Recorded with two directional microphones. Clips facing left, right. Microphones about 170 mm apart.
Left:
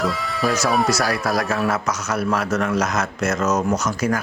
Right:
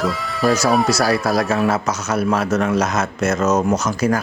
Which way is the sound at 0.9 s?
30° right (ahead or behind).